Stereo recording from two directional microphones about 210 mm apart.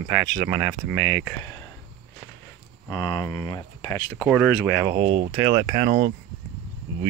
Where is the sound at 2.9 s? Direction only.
20° left (ahead or behind).